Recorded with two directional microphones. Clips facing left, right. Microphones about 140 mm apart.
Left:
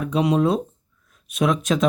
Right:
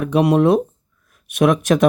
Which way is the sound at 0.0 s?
65° right (ahead or behind).